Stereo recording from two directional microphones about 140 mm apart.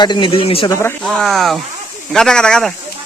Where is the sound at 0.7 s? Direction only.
20° left (ahead or behind).